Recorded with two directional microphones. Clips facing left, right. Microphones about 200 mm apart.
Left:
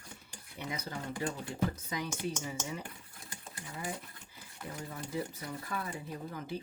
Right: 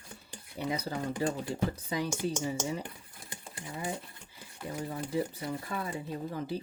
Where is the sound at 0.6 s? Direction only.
35° right (ahead or behind).